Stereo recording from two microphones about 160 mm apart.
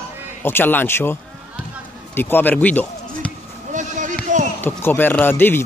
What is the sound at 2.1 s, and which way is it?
Speech, 15° left (ahead or behind).